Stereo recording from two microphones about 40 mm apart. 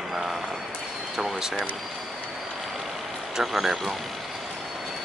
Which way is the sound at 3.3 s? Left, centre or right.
Centre.